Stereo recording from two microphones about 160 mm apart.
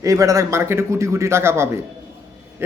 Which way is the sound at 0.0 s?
20° right (ahead or behind).